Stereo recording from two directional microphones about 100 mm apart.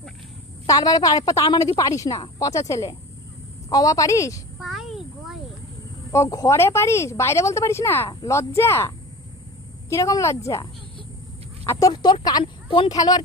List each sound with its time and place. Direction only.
0.7 s a woman's voice: 40° left (ahead or behind)
2.1 s speech: 55° left (ahead or behind)
2.4 s a woman's voice: 35° left (ahead or behind)
4.6 s a sound: centre (ahead or behind)
6.1 s speech: 35° left (ahead or behind)
9.9 s a woman's voice: 35° left (ahead or behind)
11.6 s speech: 35° left (ahead or behind)
12.0 s a woman's voice: 45° left (ahead or behind)